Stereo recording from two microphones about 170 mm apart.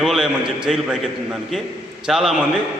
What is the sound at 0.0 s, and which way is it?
A man's voice, 5° right (ahead or behind).